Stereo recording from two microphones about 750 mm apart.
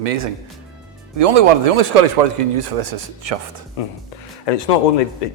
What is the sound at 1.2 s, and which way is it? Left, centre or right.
Speech, right.